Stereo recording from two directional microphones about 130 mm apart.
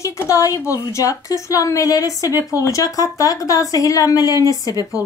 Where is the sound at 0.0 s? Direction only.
25° left (ahead or behind).